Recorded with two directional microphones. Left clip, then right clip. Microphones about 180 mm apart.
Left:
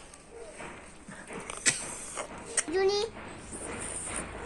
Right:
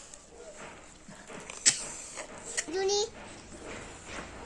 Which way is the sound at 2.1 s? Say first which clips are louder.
Left 3 dB; 15° left (ahead or behind).